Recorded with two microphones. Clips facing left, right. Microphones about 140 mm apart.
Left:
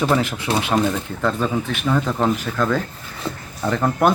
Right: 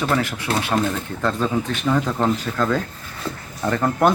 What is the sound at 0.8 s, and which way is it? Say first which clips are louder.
Speech: left 2 dB; 5° left (ahead or behind).